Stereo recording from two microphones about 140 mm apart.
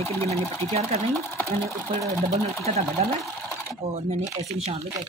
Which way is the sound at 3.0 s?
50° right (ahead or behind).